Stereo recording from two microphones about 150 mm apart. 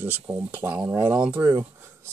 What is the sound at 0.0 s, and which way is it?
Speech, 10° right (ahead or behind).